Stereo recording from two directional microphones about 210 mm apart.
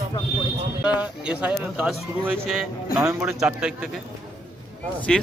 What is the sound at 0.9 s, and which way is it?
Speech, 5° right (ahead or behind).